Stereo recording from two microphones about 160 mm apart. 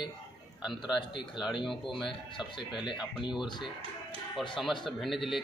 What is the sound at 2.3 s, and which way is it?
Speech, 30° left (ahead or behind).